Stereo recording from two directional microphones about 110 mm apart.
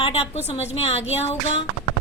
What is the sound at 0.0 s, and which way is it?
A woman's voice, 70° left (ahead or behind).